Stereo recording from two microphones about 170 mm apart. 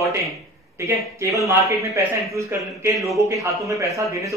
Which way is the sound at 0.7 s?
15° right (ahead or behind).